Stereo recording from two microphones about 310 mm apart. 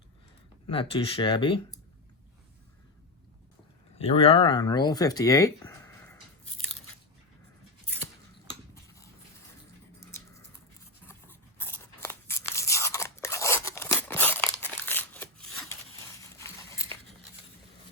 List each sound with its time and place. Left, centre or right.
0.7 s speech: centre
3.9 s speech: centre
8.7 s cutlery: centre
10.0 s dog: centre
11.1 s a sound: centre